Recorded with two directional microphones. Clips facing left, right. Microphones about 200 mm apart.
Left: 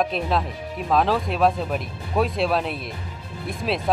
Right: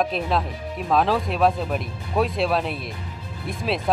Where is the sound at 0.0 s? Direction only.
Centre (ahead or behind).